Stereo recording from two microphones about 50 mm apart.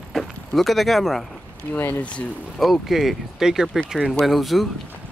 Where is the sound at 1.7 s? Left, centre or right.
Left.